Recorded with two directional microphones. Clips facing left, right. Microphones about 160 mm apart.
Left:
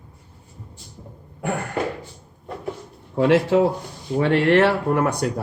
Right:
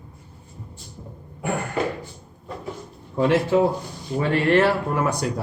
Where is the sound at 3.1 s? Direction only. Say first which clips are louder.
Left 2 dB; 75° left (ahead or behind).